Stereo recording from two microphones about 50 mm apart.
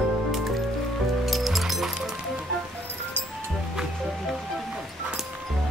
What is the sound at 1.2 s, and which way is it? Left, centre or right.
Music, centre.